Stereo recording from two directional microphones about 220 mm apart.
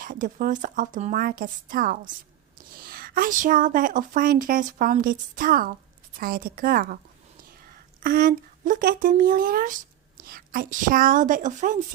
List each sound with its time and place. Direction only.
0.0 s speech: 40° right (ahead or behind)
8.0 s speech: 40° right (ahead or behind)